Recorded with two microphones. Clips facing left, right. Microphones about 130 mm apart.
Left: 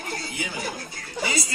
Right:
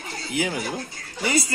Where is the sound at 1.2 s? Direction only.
50° right (ahead or behind).